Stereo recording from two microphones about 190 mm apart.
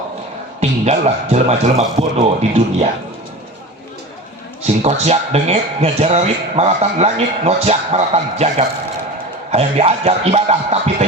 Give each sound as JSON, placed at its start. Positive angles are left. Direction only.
{"t": 0.6, "sound": "speech", "side_deg": -35}
{"t": 4.6, "sound": "speech", "side_deg": -35}